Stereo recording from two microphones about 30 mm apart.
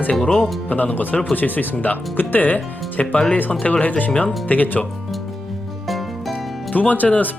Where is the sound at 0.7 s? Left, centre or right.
Left.